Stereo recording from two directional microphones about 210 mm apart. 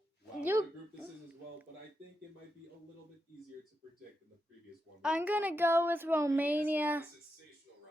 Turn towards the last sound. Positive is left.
turn(degrees=-10)  # may be behind; listen again after turning